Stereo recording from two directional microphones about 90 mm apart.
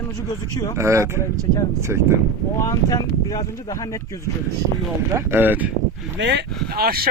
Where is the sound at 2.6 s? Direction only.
40° left (ahead or behind).